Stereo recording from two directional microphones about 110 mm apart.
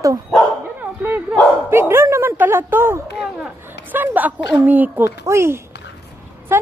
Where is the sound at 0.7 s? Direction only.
15° right (ahead or behind).